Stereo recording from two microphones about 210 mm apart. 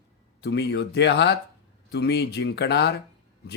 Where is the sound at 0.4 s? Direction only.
55° left (ahead or behind).